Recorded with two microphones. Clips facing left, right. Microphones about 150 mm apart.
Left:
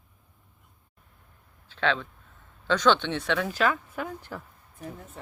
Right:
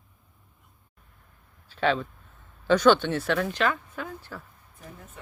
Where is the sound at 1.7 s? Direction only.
10° right (ahead or behind); by 4.4 s 15° left (ahead or behind).